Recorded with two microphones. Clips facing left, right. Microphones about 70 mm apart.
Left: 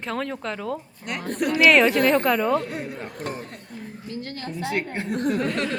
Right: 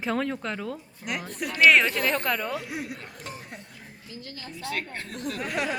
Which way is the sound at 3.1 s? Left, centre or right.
Left.